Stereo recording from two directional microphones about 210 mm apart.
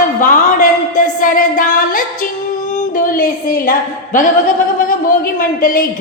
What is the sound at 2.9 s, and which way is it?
A woman's voice, 40° left (ahead or behind).